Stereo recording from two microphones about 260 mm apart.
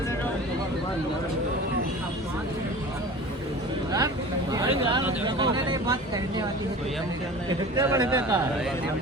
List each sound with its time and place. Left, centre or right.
4.5 s vehicle: centre
7.8 s speech: centre